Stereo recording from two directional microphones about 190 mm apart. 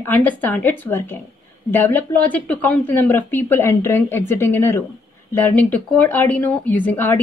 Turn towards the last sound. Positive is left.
turn(degrees=10)  # may be behind; listen again after turning